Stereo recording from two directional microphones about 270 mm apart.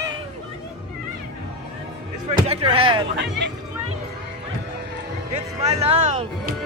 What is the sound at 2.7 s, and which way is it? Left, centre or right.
Music, centre.